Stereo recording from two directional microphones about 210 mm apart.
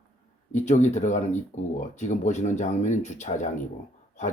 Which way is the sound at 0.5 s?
35° left (ahead or behind).